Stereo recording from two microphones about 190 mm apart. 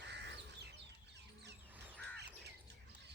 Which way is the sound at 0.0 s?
65° right (ahead or behind).